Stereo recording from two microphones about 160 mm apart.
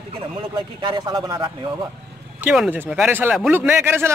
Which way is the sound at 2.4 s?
10° right (ahead or behind).